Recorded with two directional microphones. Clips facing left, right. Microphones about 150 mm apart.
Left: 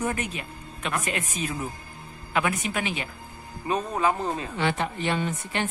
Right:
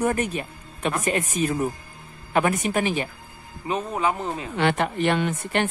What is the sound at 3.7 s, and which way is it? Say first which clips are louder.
Speech: even; 15° right (ahead or behind).